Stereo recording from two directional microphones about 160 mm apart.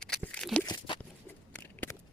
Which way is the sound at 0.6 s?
30° left (ahead or behind).